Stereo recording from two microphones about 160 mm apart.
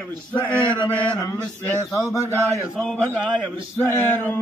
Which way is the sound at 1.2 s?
20° left (ahead or behind).